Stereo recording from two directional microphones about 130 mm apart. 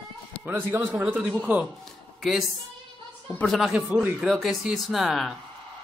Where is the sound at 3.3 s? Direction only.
10° left (ahead or behind).